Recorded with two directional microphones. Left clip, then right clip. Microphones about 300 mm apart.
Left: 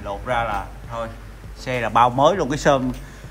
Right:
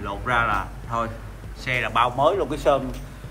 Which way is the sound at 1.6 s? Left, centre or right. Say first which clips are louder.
Left 4 dB; centre.